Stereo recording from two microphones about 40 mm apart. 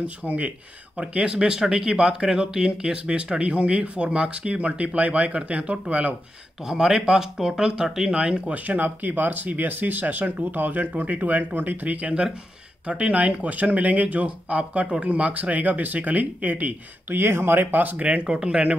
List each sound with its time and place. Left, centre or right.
0.2 s speech: right
6.6 s speech: centre
8.1 s speech: right
8.5 s speech: right
12.8 s speech: right
17.1 s speech: right
17.9 s speech: right